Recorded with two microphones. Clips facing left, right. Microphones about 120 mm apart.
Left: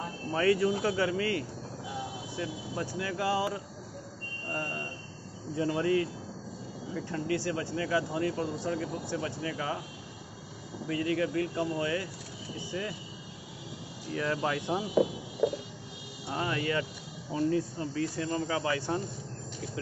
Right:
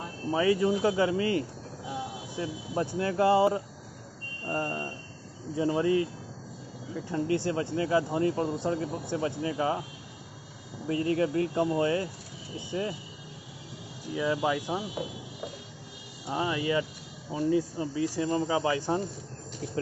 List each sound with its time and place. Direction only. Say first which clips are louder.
0.3 s speech: right 2 dB; 15° right (ahead or behind)
7.2 s speech: right 3 dB; 25° right (ahead or behind)
10.9 s speech: right 3 dB; 30° right (ahead or behind)
14.1 s speech: right 3 dB; 10° right (ahead or behind)
16.3 s speech: right 3 dB; 15° right (ahead or behind)